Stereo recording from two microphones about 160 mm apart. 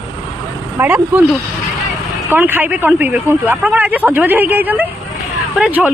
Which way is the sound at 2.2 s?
10° right (ahead or behind).